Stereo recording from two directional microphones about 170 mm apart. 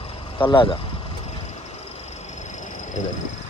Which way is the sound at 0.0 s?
30° left (ahead or behind).